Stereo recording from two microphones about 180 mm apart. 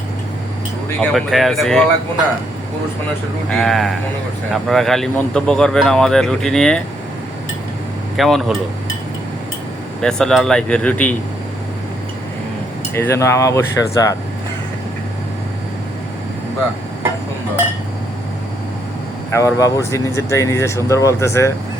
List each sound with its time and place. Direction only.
0.9 s speech: 5° left (ahead or behind)
3.5 s speech: centre (ahead or behind)
8.1 s speech: centre (ahead or behind)
10.0 s speech: 5° left (ahead or behind)
12.9 s speech: 15° left (ahead or behind)
19.3 s speech: 15° left (ahead or behind)